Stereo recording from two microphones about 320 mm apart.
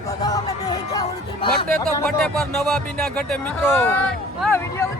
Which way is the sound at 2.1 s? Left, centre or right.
Centre.